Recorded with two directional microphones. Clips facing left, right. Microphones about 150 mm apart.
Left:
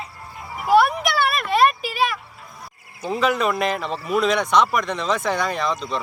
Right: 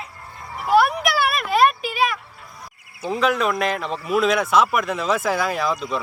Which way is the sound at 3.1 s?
Centre (ahead or behind).